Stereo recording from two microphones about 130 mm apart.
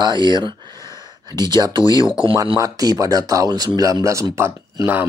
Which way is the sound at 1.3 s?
30° right (ahead or behind).